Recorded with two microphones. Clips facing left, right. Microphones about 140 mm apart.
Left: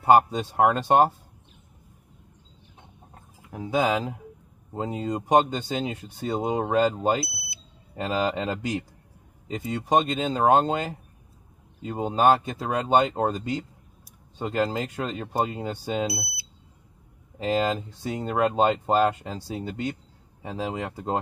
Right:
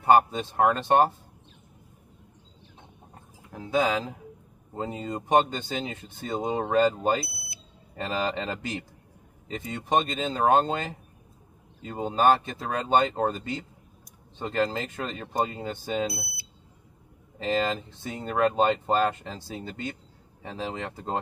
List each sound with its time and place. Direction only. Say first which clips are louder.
0.0 s speech: left 2 dB; 10° left (ahead or behind)
3.4 s speech: left 1 dB; 15° left (ahead or behind)